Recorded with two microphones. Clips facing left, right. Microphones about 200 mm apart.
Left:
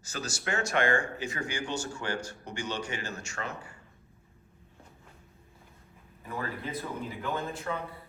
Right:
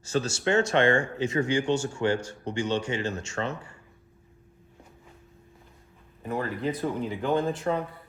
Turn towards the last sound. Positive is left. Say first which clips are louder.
# right 8 dB
turn(degrees=-35)  # may be behind; listen again after turning